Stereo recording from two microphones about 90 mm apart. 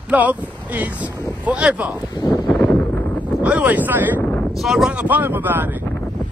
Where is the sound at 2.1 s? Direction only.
45° left (ahead or behind).